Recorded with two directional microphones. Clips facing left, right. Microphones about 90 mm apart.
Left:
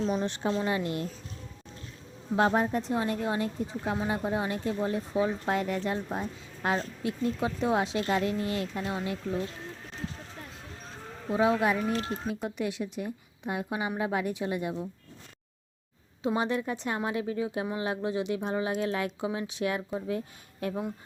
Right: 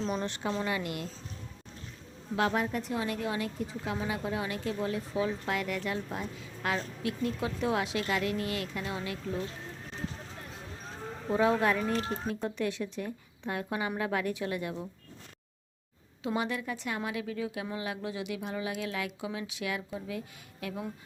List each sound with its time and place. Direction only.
0.0 s speech: 20° left (ahead or behind)
2.3 s speech: 30° left (ahead or behind)
11.6 s speech: 15° left (ahead or behind)
16.2 s speech: 25° left (ahead or behind)